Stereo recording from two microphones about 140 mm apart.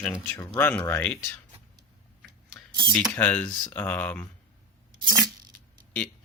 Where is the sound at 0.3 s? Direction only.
20° left (ahead or behind).